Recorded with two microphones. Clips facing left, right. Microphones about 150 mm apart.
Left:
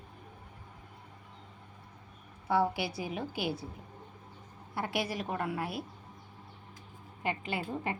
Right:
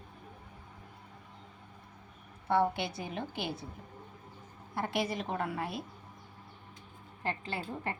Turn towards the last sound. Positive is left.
turn(degrees=15)  # may be behind; listen again after turning